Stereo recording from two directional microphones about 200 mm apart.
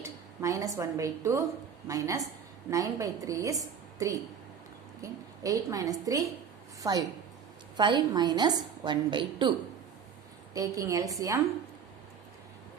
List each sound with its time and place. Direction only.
0.0 s a woman's voice: 15° right (ahead or behind)